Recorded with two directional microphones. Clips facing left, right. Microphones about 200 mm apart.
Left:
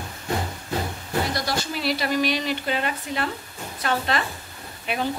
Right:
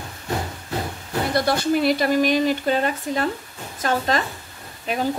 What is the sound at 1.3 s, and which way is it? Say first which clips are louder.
A woman's voice: right 8 dB; 55° right (ahead or behind).